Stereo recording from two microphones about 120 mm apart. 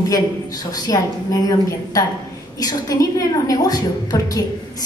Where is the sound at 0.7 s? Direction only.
30° left (ahead or behind).